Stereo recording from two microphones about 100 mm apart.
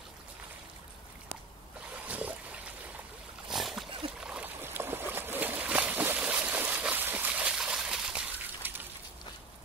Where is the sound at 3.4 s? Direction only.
5° right (ahead or behind).